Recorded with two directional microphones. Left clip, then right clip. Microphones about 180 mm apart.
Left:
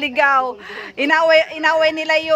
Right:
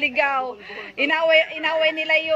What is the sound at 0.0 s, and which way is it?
A woman's voice, 20° left (ahead or behind).